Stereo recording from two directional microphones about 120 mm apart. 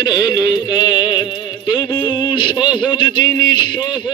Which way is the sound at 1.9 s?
15° left (ahead or behind).